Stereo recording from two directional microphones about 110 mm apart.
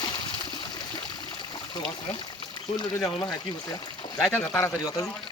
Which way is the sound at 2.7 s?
35° left (ahead or behind).